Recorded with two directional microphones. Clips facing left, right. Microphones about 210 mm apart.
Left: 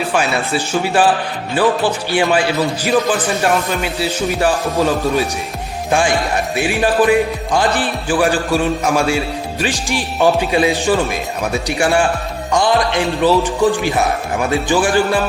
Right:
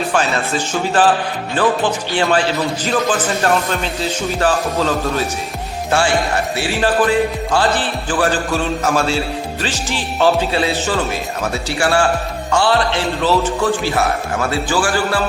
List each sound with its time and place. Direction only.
0.1 s music: 10° left (ahead or behind)